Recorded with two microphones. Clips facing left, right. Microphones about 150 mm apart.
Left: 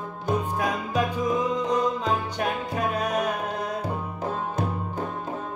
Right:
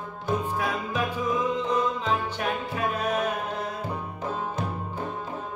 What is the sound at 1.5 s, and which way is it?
Music, 40° left (ahead or behind).